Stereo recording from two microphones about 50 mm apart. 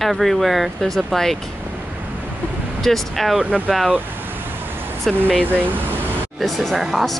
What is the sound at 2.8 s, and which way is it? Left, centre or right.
Speech, centre.